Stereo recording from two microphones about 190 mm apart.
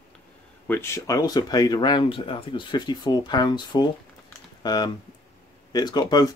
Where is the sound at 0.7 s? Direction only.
15° left (ahead or behind).